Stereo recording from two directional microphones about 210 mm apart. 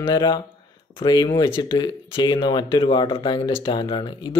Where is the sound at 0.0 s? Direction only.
20° left (ahead or behind).